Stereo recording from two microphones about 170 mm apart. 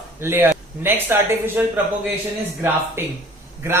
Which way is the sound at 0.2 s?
15° right (ahead or behind).